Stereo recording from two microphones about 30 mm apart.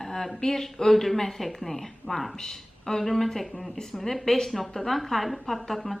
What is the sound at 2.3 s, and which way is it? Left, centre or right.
A woman's voice, left.